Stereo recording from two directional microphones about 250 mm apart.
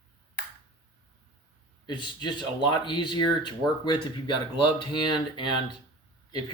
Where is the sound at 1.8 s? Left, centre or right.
Centre.